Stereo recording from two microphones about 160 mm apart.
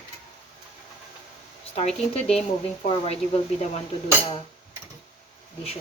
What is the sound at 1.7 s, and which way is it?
Speech, 40° left (ahead or behind).